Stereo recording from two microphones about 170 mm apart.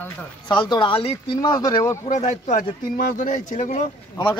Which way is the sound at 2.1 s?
45° left (ahead or behind).